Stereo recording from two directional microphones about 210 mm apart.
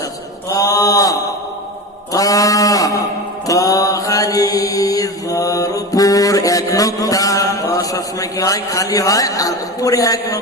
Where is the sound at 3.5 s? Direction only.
15° left (ahead or behind).